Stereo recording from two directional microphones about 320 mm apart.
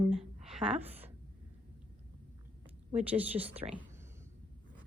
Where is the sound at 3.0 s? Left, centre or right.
Centre.